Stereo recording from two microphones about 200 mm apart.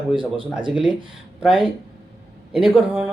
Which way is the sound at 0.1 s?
25° right (ahead or behind).